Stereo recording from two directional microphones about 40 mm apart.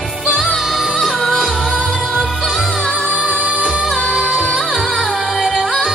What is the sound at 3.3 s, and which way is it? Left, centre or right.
Music, right.